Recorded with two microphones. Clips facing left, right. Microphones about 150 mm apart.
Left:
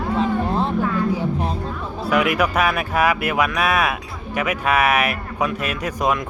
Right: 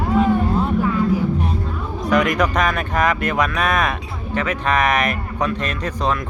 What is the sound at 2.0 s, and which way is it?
Speech, 10° left (ahead or behind).